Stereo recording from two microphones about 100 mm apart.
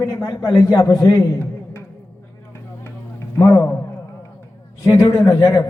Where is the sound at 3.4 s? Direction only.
35° left (ahead or behind).